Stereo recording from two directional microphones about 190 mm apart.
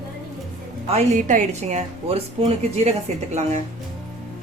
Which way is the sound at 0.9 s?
40° right (ahead or behind).